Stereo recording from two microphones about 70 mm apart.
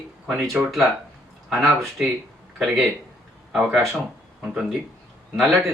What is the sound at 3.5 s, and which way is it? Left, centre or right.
Speech, centre.